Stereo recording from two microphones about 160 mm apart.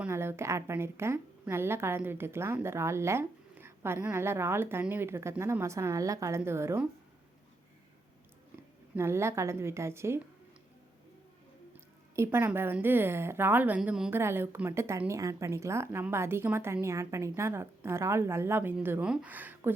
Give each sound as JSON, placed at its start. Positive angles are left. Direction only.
{"t": 0.0, "sound": "a woman's voice", "side_deg": -15}
{"t": 9.0, "sound": "a woman's voice", "side_deg": -15}
{"t": 11.7, "sound": "a woman's voice", "side_deg": -15}